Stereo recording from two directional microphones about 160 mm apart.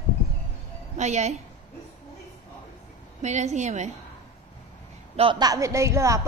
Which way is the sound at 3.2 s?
45° right (ahead or behind).